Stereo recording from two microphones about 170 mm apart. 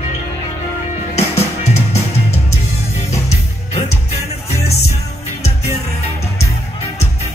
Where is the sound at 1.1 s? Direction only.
40° left (ahead or behind).